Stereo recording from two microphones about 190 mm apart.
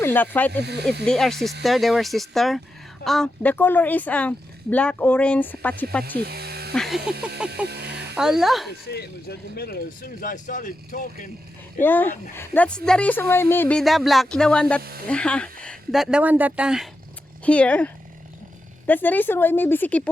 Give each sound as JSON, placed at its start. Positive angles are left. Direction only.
{"t": 0.0, "sound": "a woman's voice", "side_deg": 10}
{"t": 0.6, "sound": "speech", "side_deg": -60}
{"t": 1.0, "sound": "a woman's voice", "side_deg": 0}
{"t": 6.1, "sound": "a sound", "side_deg": -55}
{"t": 6.7, "sound": "speech", "side_deg": 0}
{"t": 7.7, "sound": "a sound", "side_deg": -60}
{"t": 8.1, "sound": "speech", "side_deg": -5}
{"t": 8.9, "sound": "speech", "side_deg": 55}
{"t": 11.8, "sound": "a woman's voice", "side_deg": 10}
{"t": 14.8, "sound": "speech", "side_deg": -55}
{"t": 15.0, "sound": "a woman's voice", "side_deg": 5}